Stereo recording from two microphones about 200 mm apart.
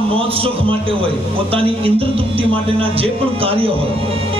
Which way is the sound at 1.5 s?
30° right (ahead or behind).